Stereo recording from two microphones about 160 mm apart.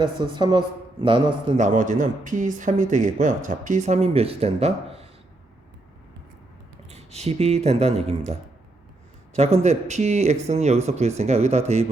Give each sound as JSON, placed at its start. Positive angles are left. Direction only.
{"t": 0.0, "sound": "a man's voice", "side_deg": -30}
{"t": 1.5, "sound": "speech", "side_deg": -50}
{"t": 6.8, "sound": "speech", "side_deg": -40}
{"t": 9.3, "sound": "speech", "side_deg": -45}